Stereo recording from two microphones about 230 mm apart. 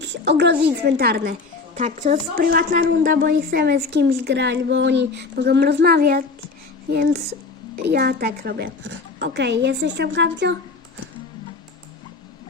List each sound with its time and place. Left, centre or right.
0.0 s speech: right
1.7 s speech: right